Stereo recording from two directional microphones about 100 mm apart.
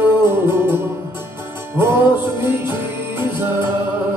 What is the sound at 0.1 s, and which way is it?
Music, 25° right (ahead or behind).